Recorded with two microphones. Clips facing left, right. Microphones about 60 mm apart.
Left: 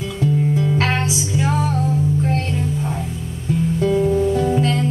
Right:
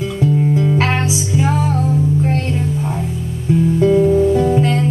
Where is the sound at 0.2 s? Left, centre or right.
Centre.